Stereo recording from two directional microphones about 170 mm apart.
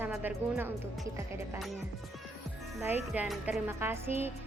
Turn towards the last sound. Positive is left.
turn(degrees=-15)  # may be behind; listen again after turning